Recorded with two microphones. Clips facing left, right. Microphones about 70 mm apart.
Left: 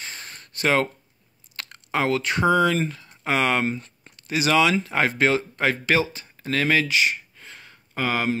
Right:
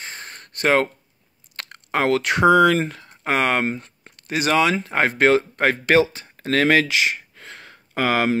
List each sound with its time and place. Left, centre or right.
0.0 s a sound: right
1.6 s speech: right
5.1 s speech: right